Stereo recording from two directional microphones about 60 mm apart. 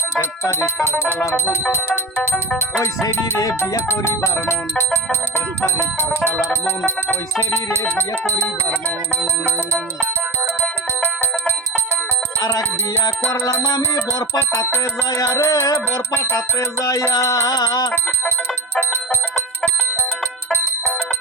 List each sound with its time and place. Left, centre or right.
2.7 s music: left
10.6 s bicycle bell: left
12.4 s music: left
13.7 s music: left
15.1 s music: left